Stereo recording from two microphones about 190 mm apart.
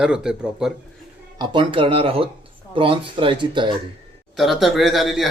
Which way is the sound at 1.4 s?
25° right (ahead or behind).